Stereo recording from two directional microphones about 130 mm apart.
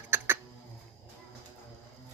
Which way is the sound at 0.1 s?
15° right (ahead or behind).